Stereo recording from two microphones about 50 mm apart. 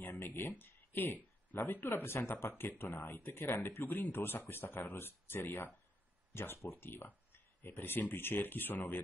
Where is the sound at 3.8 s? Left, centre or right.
Left.